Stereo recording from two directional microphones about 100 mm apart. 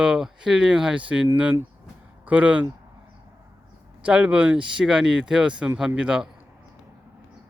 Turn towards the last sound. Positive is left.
turn(degrees=-10)  # may be behind; listen again after turning